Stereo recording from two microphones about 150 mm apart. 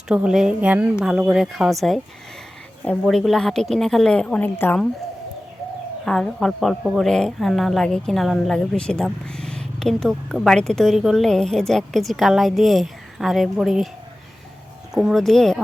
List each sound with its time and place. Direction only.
0.1 s a woman's voice: 5° right (ahead or behind)
3.0 s a woman's voice: centre (ahead or behind)
6.1 s a woman's voice: 5° left (ahead or behind)
14.9 s a woman's voice: centre (ahead or behind)